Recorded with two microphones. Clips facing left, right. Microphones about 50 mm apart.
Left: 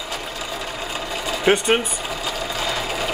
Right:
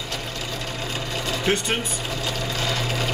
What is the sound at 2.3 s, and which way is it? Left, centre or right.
Sewing machine, centre.